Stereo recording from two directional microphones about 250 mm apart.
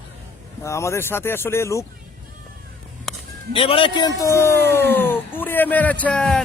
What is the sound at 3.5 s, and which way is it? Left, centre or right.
A man's voice, left.